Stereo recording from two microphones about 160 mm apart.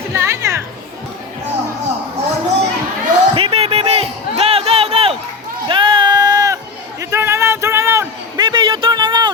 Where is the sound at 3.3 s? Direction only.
40° right (ahead or behind).